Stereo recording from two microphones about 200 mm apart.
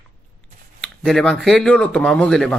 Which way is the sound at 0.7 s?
Centre (ahead or behind).